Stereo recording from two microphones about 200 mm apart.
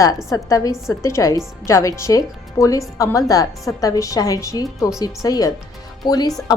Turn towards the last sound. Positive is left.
turn(degrees=20)  # may be behind; listen again after turning